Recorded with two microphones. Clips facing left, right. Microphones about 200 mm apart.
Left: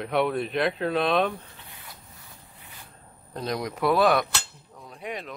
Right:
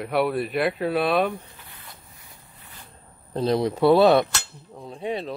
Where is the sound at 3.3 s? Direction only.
30° right (ahead or behind).